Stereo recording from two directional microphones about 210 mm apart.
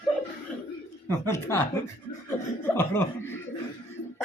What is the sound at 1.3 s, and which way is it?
A woman's voice, 10° left (ahead or behind).